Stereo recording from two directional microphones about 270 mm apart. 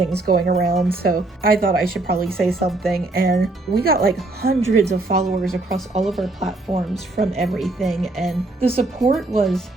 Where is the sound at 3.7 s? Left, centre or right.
Right.